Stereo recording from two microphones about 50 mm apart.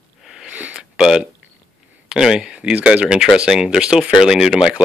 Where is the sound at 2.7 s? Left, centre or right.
Right.